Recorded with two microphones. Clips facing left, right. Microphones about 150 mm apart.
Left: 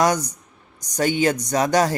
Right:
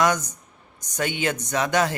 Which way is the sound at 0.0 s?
35° left (ahead or behind).